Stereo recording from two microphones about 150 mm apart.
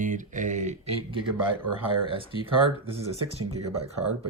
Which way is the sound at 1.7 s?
35° right (ahead or behind).